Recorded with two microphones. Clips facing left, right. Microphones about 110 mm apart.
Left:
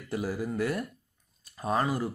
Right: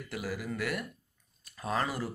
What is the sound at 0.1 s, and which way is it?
Speech, 30° left (ahead or behind).